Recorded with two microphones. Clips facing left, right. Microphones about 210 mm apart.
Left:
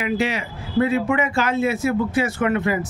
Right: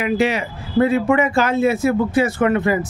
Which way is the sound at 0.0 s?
55° right (ahead or behind).